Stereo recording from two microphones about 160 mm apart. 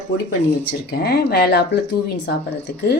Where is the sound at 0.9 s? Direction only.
80° left.